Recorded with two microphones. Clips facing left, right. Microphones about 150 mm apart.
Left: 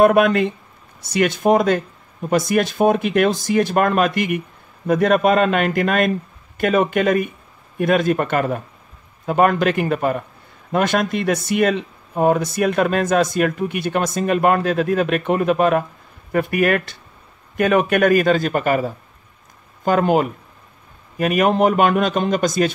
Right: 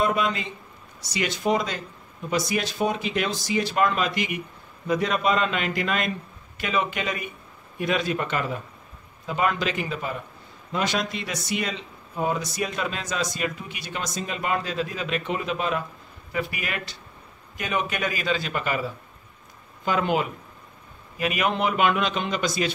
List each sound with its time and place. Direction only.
0.0 s speech: 60° left (ahead or behind)